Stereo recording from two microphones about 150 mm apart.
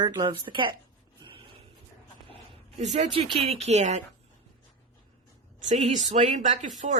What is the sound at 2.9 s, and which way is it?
Speech, 45° right (ahead or behind).